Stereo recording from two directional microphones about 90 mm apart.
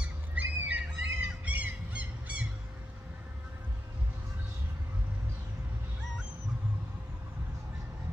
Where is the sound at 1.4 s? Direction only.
15° right (ahead or behind).